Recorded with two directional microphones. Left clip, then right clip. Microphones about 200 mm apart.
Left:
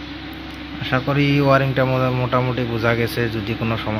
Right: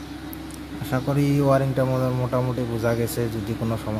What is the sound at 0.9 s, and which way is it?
Speech, 5° right (ahead or behind).